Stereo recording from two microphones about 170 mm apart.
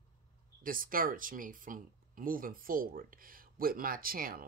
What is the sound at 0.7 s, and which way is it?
Speech, 55° right (ahead or behind).